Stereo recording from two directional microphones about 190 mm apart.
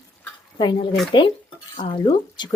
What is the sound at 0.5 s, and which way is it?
Speech, 25° left (ahead or behind).